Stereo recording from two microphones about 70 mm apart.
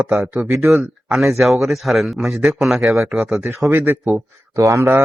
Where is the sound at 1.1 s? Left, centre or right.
Centre.